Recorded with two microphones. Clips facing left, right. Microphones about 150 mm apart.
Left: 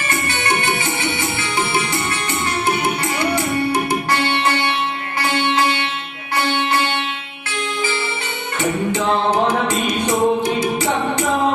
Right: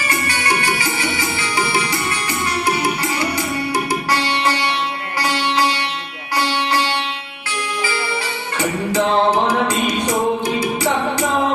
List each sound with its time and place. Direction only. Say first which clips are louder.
0.3 s music: left 1 dB; 25° left (ahead or behind)
4.2 s music: left 1 dB; 55° left (ahead or behind)
8.5 s music: left 1 dB; 25° left (ahead or behind)
10.1 s music: left 5 dB; 25° left (ahead or behind)